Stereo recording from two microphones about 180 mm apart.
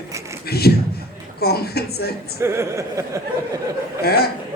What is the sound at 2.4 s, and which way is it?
Chuckle, 15° right (ahead or behind).